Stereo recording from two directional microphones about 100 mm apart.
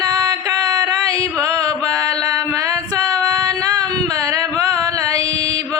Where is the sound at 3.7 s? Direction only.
40° right (ahead or behind).